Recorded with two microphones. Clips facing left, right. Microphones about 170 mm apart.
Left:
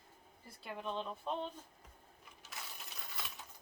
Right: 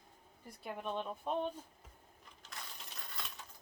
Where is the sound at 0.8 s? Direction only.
15° right (ahead or behind).